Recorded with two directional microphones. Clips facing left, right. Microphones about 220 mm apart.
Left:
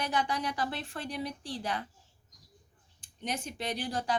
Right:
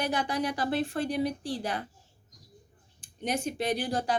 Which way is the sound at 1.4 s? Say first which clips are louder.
Right 5 dB; 10° right (ahead or behind).